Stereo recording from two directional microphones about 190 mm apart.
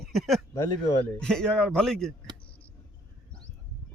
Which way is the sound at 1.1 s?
5° left (ahead or behind).